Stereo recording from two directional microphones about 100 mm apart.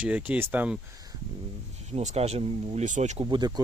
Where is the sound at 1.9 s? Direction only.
90° right.